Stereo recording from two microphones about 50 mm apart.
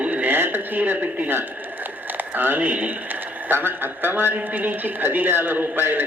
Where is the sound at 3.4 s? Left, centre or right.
Right.